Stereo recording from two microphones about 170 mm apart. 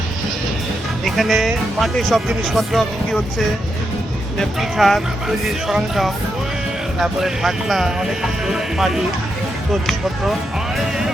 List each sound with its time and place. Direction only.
1.0 s speech: centre (ahead or behind)